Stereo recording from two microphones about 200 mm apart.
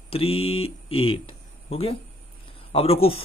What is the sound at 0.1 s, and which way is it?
Speech, 30° left (ahead or behind).